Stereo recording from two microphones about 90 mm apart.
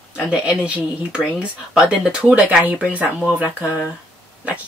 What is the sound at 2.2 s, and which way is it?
Speech, 15° right (ahead or behind).